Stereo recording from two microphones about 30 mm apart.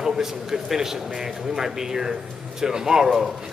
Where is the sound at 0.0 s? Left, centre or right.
Centre.